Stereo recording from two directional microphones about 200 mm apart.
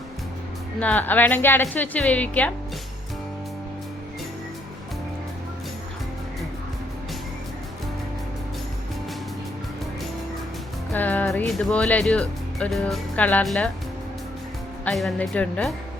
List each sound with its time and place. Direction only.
0.8 s a woman's voice: 5° left (ahead or behind)
10.9 s speech: 10° left (ahead or behind)
14.8 s speech: centre (ahead or behind)